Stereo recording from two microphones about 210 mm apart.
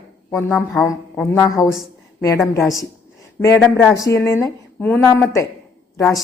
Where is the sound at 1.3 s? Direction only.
5° left (ahead or behind).